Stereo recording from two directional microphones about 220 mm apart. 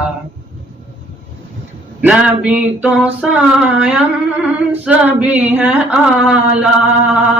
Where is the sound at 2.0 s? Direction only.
5° right (ahead or behind).